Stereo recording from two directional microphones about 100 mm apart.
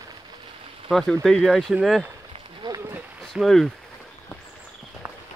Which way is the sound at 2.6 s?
50° right (ahead or behind).